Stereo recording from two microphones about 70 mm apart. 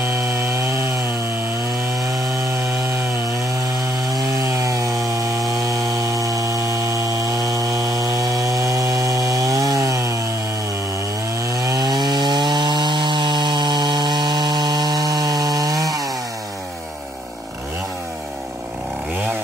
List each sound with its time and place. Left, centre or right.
0.0 s chainsaw: right
4.5 s chainsaw: right
11.4 s sawing: right